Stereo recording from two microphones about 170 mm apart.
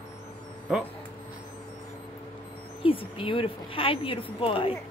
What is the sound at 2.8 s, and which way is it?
A woman's voice, 30° left (ahead or behind).